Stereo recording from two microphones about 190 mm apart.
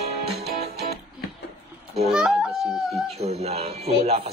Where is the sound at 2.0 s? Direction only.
Centre (ahead or behind).